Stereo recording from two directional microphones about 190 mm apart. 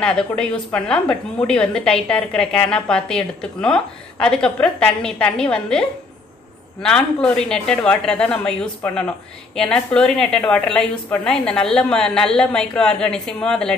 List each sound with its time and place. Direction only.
0.0 s a woman's voice: 5° left (ahead or behind)